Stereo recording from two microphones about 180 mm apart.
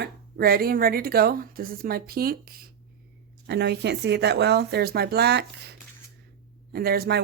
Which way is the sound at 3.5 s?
70° right (ahead or behind).